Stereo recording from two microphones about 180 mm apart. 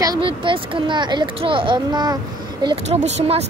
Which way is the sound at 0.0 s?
20° right (ahead or behind).